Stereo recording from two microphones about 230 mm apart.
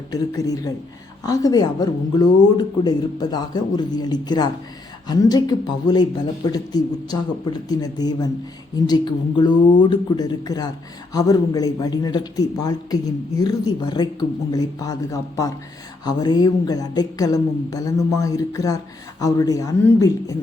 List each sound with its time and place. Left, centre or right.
0.1 s speech: centre